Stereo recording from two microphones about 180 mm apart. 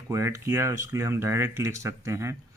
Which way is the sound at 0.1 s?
15° right (ahead or behind).